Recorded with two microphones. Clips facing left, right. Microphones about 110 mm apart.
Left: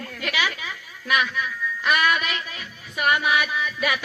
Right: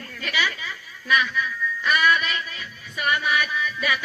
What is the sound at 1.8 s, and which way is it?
Music, 60° left (ahead or behind).